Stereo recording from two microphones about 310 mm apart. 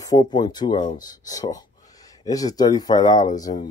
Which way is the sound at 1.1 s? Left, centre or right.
Centre.